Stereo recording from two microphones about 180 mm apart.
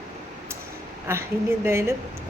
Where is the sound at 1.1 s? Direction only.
15° right (ahead or behind).